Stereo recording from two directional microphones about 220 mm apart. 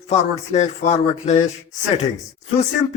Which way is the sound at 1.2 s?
30° left (ahead or behind).